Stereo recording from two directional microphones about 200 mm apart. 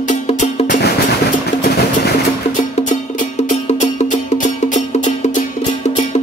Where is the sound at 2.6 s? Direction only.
40° left (ahead or behind).